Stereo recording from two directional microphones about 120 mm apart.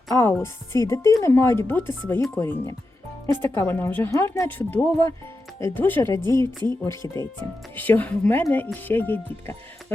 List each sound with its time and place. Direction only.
0.1 s speech: 25° left (ahead or behind)